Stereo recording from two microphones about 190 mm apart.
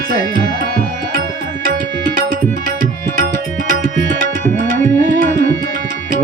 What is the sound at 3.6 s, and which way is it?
Tabla, 45° right (ahead or behind).